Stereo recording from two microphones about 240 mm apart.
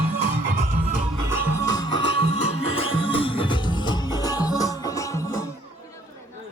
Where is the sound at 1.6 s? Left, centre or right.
Centre.